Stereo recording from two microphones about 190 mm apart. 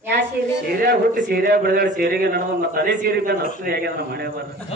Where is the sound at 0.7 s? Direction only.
50° right (ahead or behind).